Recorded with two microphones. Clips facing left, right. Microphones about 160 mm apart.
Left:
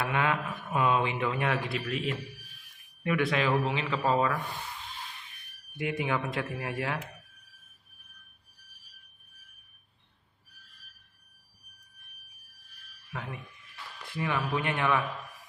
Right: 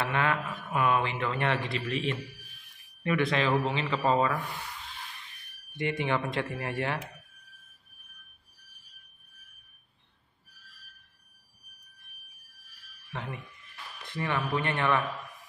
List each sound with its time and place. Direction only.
0.0 s speech: 15° left (ahead or behind)
5.7 s speech: 5° left (ahead or behind)
13.1 s speech: 5° left (ahead or behind)